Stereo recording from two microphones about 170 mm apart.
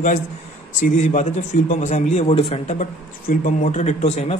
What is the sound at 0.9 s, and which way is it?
A man's voice, 45° left (ahead or behind).